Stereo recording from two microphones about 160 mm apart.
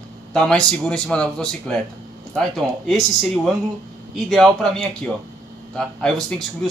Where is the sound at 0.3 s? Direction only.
5° left (ahead or behind).